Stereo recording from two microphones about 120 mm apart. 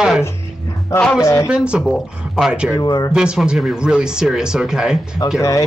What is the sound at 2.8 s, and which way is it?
Speech, 35° left (ahead or behind).